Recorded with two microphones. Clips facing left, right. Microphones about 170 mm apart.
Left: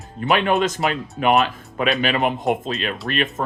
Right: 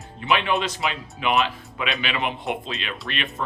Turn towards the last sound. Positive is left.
turn(degrees=45)  # may be behind; listen again after turning